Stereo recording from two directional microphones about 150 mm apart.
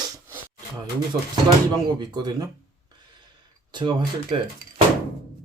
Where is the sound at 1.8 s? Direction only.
30° right (ahead or behind).